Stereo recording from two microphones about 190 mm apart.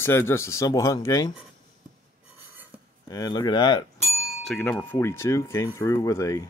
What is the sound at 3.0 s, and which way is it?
Chink, 20° left (ahead or behind).